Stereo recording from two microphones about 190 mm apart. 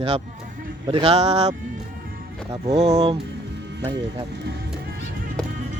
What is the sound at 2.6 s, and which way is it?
Speech, 35° right (ahead or behind).